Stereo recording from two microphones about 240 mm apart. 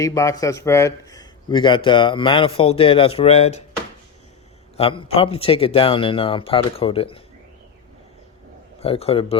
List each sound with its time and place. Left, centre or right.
0.0 s a man's voice: centre
4.8 s a man's voice: left
8.8 s a man's voice: left